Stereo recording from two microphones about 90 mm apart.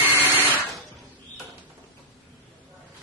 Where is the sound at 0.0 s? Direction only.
20° right (ahead or behind).